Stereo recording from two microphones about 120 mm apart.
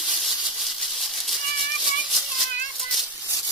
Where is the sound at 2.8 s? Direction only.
Centre (ahead or behind).